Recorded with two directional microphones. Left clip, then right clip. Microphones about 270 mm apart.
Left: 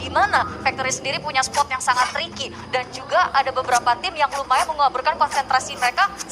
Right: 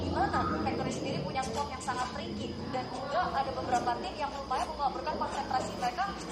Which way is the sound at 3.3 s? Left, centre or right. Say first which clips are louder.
Left 12 dB; left.